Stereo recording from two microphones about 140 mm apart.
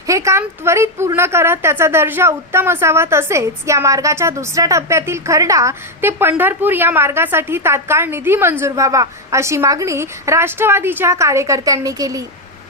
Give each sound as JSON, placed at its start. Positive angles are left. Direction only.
{"t": 0.1, "sound": "a woman's voice", "side_deg": -20}